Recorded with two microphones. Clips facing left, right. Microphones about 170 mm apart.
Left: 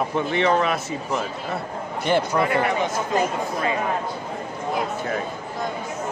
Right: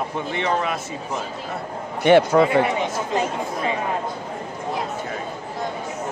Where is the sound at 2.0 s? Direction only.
65° right (ahead or behind).